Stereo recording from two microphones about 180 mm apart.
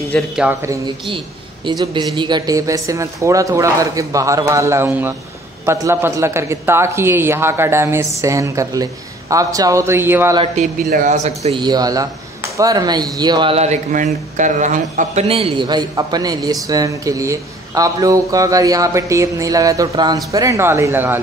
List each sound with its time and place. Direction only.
0.1 s a man's voice: 5° left (ahead or behind)
0.5 s speech: 15° right (ahead or behind)
1.0 s speech: 25° right (ahead or behind)
10.3 s speech: 30° right (ahead or behind)
10.9 s speech: 45° right (ahead or behind)
11.6 s a man's voice: 20° right (ahead or behind); by 15.2 s 45° right (ahead or behind)
15.2 s a man's voice: 30° right (ahead or behind); by 21.2 s 10° right (ahead or behind)